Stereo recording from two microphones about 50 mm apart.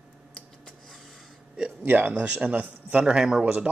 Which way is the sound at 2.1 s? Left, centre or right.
Right.